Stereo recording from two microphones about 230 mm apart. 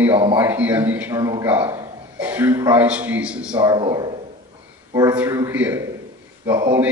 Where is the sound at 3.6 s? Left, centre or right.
Centre.